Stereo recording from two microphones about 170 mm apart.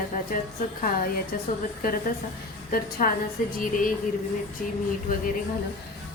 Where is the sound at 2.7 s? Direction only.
55° left (ahead or behind).